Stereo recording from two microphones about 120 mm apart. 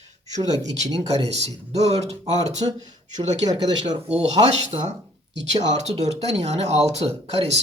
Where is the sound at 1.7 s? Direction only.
65° right (ahead or behind).